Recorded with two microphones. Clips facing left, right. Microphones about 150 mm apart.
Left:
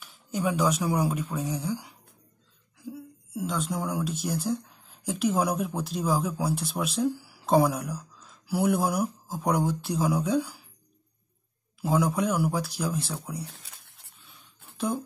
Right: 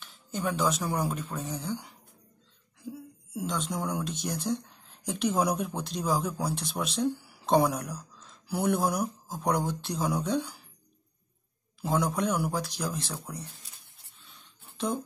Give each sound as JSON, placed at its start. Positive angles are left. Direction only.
{"t": 0.0, "sound": "a woman's voice", "side_deg": 5}
{"t": 11.8, "sound": "speech", "side_deg": 5}
{"t": 13.5, "sound": "a sound", "side_deg": 70}